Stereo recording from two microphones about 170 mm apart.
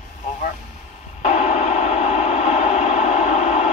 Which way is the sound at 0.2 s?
45° left (ahead or behind).